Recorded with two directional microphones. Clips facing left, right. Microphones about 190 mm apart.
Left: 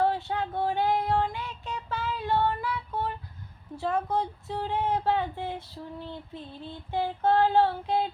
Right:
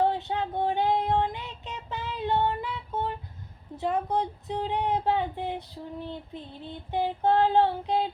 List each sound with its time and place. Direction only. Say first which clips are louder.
0.0 s child singing: right 1 dB; 20° right (ahead or behind)
3.8 s speech: right 1 dB; 20° right (ahead or behind)